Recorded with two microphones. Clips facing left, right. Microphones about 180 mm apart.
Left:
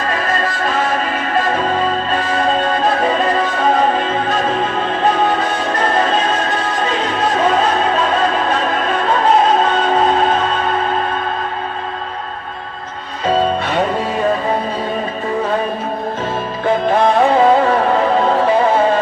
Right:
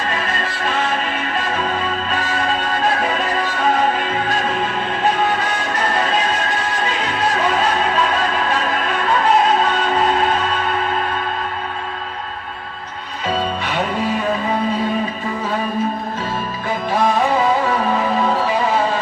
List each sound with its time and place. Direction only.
3.0 s music: 40° left (ahead or behind)
5.8 s music: 40° left (ahead or behind)
13.2 s music: 40° left (ahead or behind)
16.8 s music: 60° left (ahead or behind)